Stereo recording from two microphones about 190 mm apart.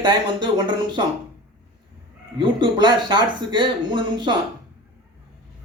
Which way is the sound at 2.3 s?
25° right (ahead or behind).